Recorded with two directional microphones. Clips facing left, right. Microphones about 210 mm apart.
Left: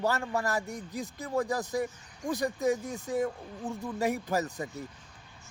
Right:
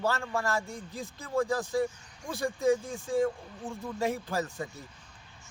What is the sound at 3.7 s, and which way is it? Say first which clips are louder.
Speech: left 3 dB; 35° left (ahead or behind).